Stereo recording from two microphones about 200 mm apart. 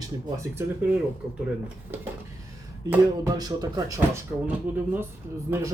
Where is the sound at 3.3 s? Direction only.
20° right (ahead or behind).